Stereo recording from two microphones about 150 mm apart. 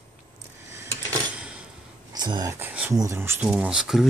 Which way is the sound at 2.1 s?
25° right (ahead or behind).